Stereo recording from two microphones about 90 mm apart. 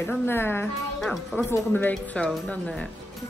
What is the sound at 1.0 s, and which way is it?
Speech, centre (ahead or behind).